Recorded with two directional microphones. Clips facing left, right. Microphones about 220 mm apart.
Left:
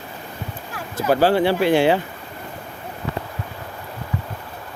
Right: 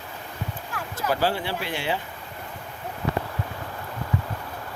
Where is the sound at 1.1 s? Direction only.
65° left (ahead or behind); by 2.0 s 90° left.